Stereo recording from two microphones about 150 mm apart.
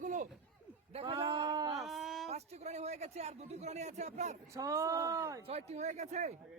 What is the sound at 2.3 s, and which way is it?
Speech, 45° right (ahead or behind).